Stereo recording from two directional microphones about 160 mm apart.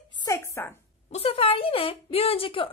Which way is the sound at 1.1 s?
35° left (ahead or behind).